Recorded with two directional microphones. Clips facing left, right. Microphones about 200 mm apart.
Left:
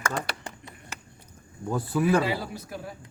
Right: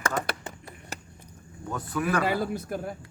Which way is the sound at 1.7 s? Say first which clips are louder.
Left 4 dB; 30° left (ahead or behind).